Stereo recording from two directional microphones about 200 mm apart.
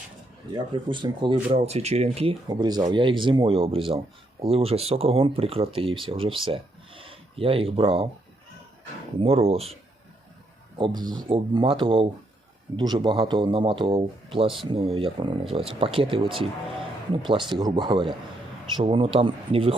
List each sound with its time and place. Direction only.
0.5 s speech: 25° right (ahead or behind)
2.5 s speech: 20° right (ahead or behind)
9.2 s speech: 30° right (ahead or behind)
10.8 s speech: 25° right (ahead or behind)